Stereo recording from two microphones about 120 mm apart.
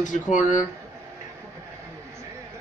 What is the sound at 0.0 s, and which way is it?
Speech, 90° left.